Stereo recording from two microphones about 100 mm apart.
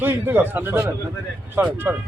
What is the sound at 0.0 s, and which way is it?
A man's voice, 20° right (ahead or behind).